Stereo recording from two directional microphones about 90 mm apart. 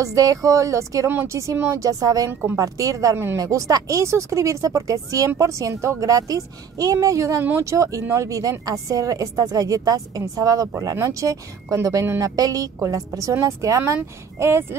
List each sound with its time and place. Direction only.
0.0 s a woman's voice: 40° right (ahead or behind)